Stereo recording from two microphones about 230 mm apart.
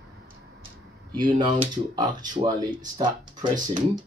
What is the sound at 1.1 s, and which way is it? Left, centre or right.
Speech, centre.